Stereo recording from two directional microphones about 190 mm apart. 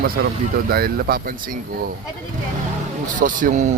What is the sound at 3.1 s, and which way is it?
Speech, 45° right (ahead or behind).